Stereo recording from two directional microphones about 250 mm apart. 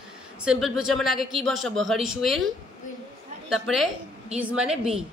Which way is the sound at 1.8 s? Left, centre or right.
Right.